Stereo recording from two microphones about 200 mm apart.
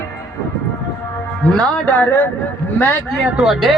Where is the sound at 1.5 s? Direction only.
10° left (ahead or behind).